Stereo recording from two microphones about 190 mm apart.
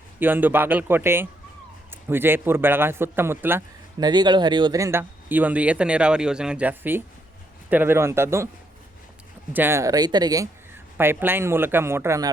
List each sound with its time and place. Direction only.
0.2 s speech: 10° right (ahead or behind)
3.9 s speech: 20° right (ahead or behind)
9.5 s speech: 10° right (ahead or behind)